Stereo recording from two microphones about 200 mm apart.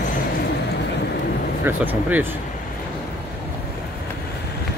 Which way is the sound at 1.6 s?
10° right (ahead or behind).